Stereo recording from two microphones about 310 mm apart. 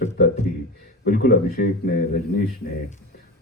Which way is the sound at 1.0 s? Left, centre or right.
Left.